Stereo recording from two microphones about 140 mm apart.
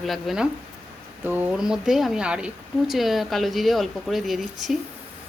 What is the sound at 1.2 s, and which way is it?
A woman's voice, 15° right (ahead or behind).